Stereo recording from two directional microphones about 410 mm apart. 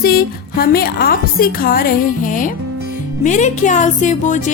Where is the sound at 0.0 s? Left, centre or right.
Left.